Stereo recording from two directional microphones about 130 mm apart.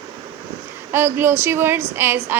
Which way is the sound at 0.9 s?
20° right (ahead or behind).